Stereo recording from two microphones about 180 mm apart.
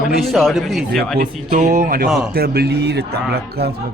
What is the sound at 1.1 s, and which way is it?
Speech, 45° right (ahead or behind).